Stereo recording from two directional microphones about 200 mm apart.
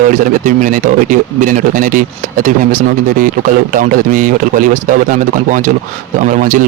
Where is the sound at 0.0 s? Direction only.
40° right (ahead or behind).